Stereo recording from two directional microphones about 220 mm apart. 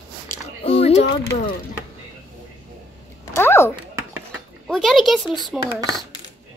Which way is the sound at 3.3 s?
10° left (ahead or behind).